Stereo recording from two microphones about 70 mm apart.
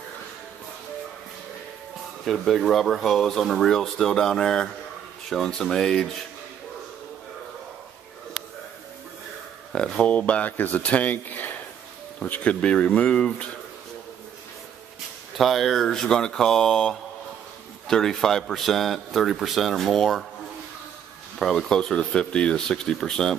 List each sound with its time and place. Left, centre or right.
2.2 s speech: centre
9.7 s speech: centre
15.3 s speech: centre
21.4 s speech: centre